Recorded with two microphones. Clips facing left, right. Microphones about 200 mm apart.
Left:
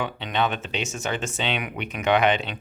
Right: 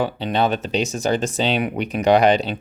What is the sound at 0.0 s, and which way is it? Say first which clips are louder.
Speech: right 5 dB; 35° right (ahead or behind).